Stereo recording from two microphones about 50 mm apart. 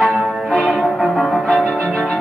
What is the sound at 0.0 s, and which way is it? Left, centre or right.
Music, centre.